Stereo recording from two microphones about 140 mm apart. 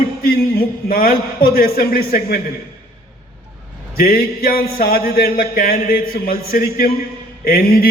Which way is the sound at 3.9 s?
90° left.